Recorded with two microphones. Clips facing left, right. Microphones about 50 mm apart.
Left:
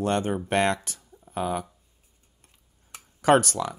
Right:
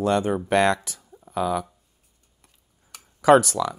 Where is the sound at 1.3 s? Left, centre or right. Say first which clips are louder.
Right 4 dB; left.